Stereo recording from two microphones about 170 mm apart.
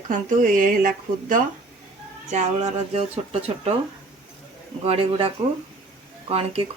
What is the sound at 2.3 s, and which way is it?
Speech, 40° right (ahead or behind).